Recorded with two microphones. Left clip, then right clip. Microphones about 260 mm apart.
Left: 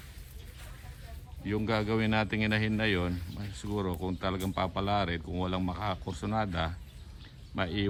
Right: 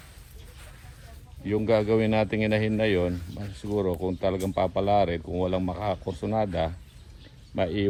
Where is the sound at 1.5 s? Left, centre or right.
Left.